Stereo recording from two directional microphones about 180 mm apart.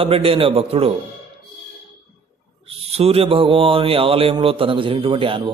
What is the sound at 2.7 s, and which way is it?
Speech, 35° right (ahead or behind).